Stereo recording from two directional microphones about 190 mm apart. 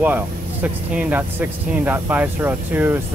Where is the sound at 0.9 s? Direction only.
10° right (ahead or behind).